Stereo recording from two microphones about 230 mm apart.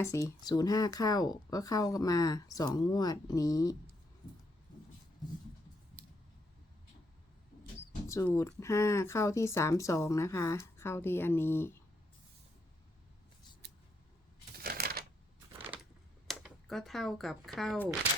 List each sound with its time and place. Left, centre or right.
0.0 s speech: centre
8.0 s speech: centre
14.5 s typewriter: right
15.7 s typing: centre